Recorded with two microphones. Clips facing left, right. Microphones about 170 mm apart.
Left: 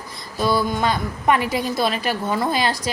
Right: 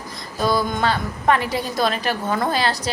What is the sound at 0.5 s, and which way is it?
A woman's voice, 10° left (ahead or behind).